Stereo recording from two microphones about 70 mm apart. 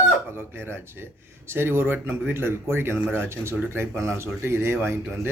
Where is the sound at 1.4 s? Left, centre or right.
Right.